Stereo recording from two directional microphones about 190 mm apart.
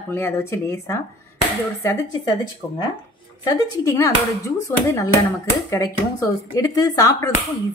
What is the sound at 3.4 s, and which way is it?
Speech, 20° left (ahead or behind).